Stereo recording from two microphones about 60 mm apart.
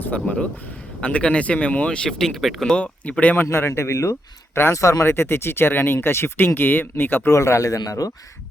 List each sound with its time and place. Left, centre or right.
0.0 s speech: left
2.0 s speech: centre
2.7 s speech: left
3.3 s speech: left
4.7 s speech: left
5.0 s speech: left
7.3 s speech: left